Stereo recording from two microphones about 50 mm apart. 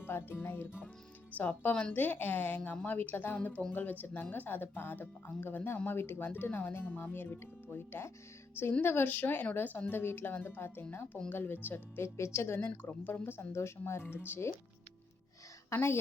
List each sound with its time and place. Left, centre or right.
0.0 s speech: left
1.7 s speech: left
2.0 s speech: left
3.3 s speech: left
9.9 s speech: left
12.0 s speech: left
12.5 s speech: left
13.5 s speech: left
14.0 s speech: left
15.7 s speech: left